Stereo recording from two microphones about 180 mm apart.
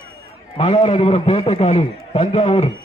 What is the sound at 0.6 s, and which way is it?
A man's voice, 30° left (ahead or behind).